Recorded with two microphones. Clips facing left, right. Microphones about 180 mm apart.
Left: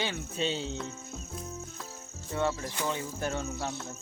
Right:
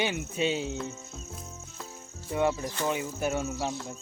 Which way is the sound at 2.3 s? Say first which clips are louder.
Right 3 dB; 15° right (ahead or behind).